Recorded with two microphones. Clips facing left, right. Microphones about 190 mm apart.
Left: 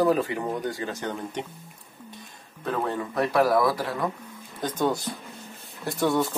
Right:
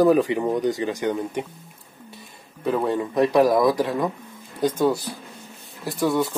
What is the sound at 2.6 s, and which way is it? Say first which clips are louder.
Speech: right 5 dB; 15° right (ahead or behind).